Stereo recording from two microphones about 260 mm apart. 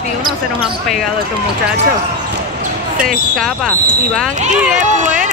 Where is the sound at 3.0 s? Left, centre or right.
Centre.